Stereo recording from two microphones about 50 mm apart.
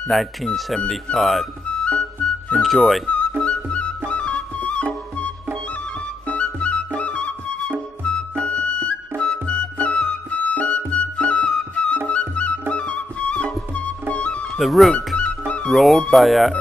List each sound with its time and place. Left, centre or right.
0.1 s speech: centre
1.9 s music: left
2.6 s speech: centre
4.1 s flute: left
6.2 s flute: left
8.0 s music: left
14.6 s speech: centre
15.1 s music: centre
15.7 s speech: centre